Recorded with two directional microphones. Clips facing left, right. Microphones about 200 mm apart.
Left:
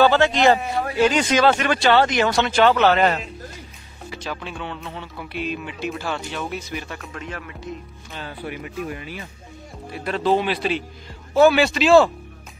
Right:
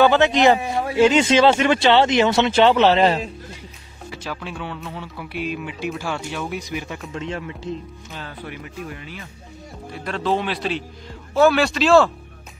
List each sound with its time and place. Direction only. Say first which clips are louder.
0.0 s speech: right 1 dB; 20° right (ahead or behind)
4.1 s speech: even; 5° right (ahead or behind)
7.2 s speech: right 7 dB; 25° right (ahead or behind)
8.1 s speech: left 3 dB; 10° left (ahead or behind)
9.9 s speech: left 2 dB; 5° left (ahead or behind)